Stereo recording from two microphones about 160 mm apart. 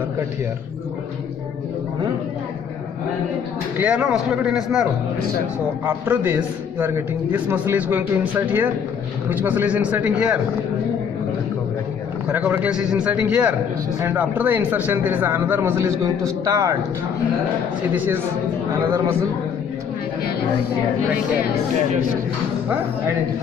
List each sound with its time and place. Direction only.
3.7 s speech: 5° right (ahead or behind)
5.9 s a man's voice: 15° right (ahead or behind)
12.3 s a man's voice: 10° right (ahead or behind)
17.9 s a man's voice: 10° right (ahead or behind)